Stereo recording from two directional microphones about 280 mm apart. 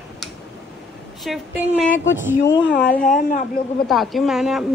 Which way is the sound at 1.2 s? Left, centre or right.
Centre.